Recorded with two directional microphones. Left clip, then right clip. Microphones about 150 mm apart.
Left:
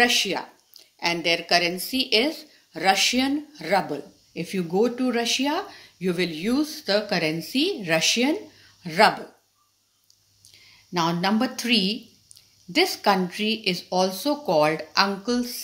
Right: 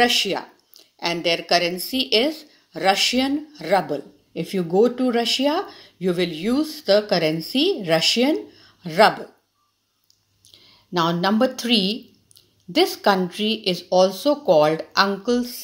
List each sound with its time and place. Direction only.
0.0 s speech: 35° right (ahead or behind)
10.4 s speech: 30° right (ahead or behind)